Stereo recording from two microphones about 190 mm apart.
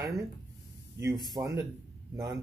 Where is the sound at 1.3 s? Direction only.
15° right (ahead or behind).